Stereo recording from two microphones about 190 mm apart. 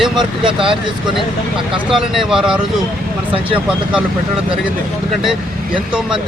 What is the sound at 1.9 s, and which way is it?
Speech, centre (ahead or behind).